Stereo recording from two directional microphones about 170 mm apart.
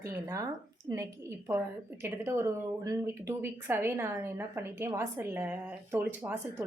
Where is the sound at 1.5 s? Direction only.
15° right (ahead or behind).